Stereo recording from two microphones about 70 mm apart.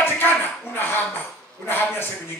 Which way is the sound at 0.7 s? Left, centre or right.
Left.